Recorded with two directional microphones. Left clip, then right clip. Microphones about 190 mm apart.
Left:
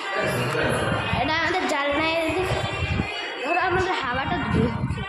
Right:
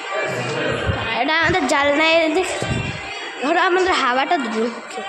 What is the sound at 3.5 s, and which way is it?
Speech, 50° right (ahead or behind).